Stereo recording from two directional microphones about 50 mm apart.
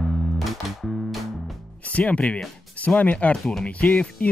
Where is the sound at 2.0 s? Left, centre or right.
Left.